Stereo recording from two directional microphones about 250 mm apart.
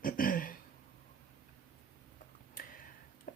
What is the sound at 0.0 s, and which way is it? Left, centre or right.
Throat clearing, left.